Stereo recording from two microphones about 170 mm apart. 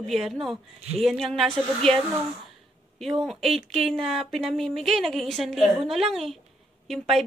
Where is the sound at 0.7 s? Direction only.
40° right (ahead or behind).